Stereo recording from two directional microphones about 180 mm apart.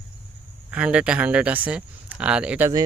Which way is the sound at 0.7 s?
5° right (ahead or behind).